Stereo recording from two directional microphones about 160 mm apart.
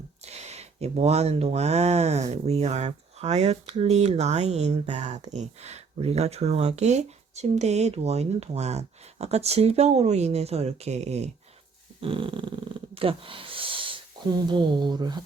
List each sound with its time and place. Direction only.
0.3 s speech: 40° right (ahead or behind); by 15.2 s 25° right (ahead or behind)